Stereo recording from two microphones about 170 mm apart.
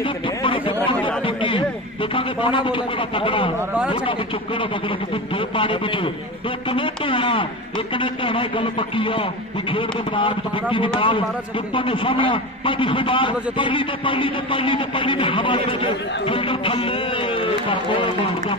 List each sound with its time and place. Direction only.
0.0 s a sound: 30° left (ahead or behind)
1.2 s a man's voice: 30° left (ahead or behind)
4.6 s a man's voice: 30° left (ahead or behind)